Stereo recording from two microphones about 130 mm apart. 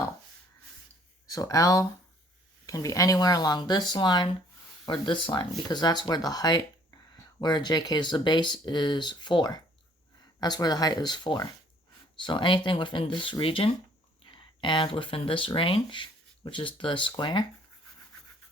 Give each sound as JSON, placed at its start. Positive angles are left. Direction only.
{"t": 1.3, "sound": "speech", "side_deg": 25}